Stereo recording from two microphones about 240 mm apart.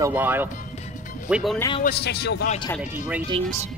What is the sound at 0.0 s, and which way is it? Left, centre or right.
Speech, centre.